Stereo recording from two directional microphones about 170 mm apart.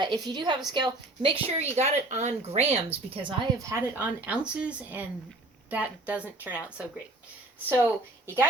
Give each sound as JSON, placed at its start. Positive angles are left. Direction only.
{"t": 0.0, "sound": "a woman's voice", "side_deg": -25}
{"t": 1.5, "sound": "a woman's voice", "side_deg": -40}
{"t": 3.2, "sound": "a woman's voice", "side_deg": -25}
{"t": 3.7, "sound": "a woman's voice", "side_deg": -15}